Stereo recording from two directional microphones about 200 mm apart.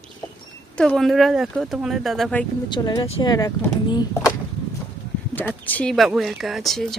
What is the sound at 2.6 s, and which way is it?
Speech, 20° left (ahead or behind).